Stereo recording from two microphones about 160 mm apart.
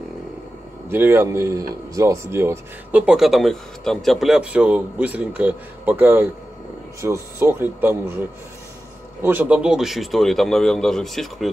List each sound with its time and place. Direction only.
0.8 s speech: 15° right (ahead or behind)
9.2 s speech: 10° right (ahead or behind)